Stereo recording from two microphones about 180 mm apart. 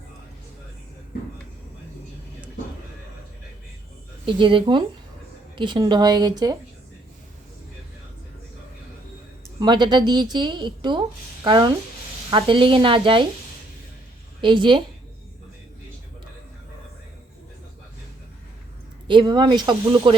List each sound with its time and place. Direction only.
4.3 s a woman's voice: 30° right (ahead or behind)
9.6 s a woman's voice: 25° right (ahead or behind)
14.4 s a woman's voice: 25° right (ahead or behind)
19.0 s a woman's voice: 25° right (ahead or behind)